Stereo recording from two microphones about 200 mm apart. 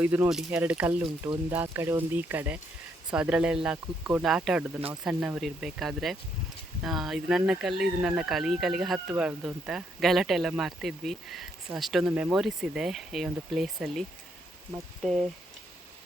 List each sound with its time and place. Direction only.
0.0 s speech: 10° right (ahead or behind)
15.0 s speech: centre (ahead or behind)